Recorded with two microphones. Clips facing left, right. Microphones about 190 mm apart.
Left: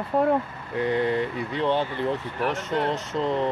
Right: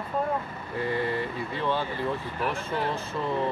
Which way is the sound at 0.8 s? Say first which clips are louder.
Left 5 dB; 20° left (ahead or behind).